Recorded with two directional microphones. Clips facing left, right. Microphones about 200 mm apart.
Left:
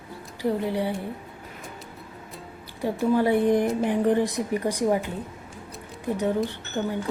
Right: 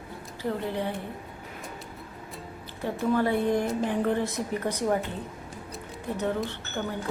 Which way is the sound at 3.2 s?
15° left (ahead or behind).